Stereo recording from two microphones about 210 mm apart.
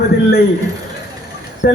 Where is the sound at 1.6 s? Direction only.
50° left (ahead or behind).